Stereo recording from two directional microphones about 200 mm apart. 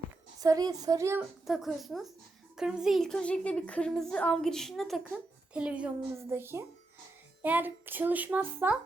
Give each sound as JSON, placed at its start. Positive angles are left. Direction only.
{"t": 0.4, "sound": "a child's voice", "side_deg": -20}
{"t": 1.5, "sound": "a woman's voice", "side_deg": 0}